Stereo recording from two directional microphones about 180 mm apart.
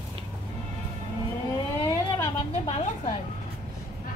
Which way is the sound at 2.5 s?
35° left (ahead or behind).